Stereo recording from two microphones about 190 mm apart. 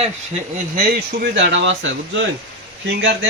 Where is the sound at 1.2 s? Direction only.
70° right (ahead or behind).